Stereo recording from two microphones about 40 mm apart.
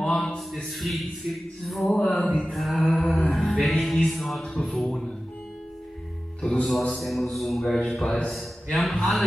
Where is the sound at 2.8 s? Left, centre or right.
Centre.